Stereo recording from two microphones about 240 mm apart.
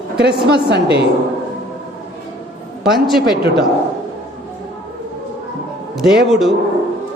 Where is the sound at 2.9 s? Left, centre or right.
Centre.